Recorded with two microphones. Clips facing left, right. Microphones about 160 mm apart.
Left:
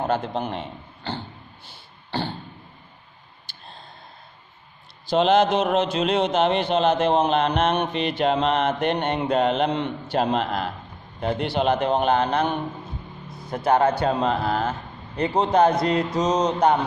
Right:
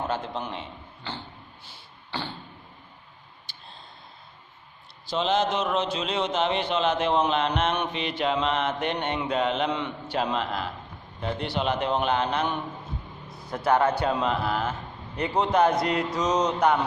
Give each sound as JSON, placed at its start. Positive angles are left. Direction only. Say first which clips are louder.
{"t": 0.0, "sound": "a man's voice", "louder": "left 5 dB", "side_deg": 50}
{"t": 5.1, "sound": "speech", "louder": "left 7 dB", "side_deg": 70}
{"t": 6.7, "sound": "mantra", "louder": "left 4 dB", "side_deg": 40}
{"t": 10.1, "sound": "speech", "louder": "left 5 dB", "side_deg": 55}
{"t": 11.6, "sound": "mantra", "louder": "left 5 dB", "side_deg": 45}
{"t": 13.5, "sound": "a man's voice", "louder": "left 3 dB", "side_deg": 20}
{"t": 13.9, "sound": "a man's voice", "louder": "left 3 dB", "side_deg": 35}